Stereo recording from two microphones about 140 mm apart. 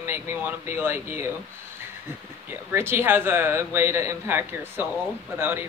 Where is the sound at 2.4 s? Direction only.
15° right (ahead or behind).